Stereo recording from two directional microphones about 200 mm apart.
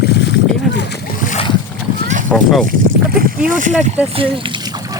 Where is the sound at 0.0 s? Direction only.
55° left (ahead or behind).